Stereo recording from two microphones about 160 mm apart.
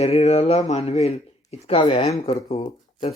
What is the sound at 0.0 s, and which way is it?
Speech, 40° left (ahead or behind).